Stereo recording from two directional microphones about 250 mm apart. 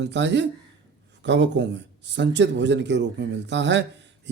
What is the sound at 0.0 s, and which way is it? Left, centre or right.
A man's voice, right.